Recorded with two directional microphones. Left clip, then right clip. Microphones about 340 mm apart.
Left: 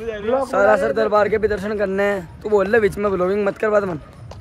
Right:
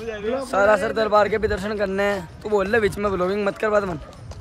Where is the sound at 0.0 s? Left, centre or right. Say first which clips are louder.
Left 2 dB; left.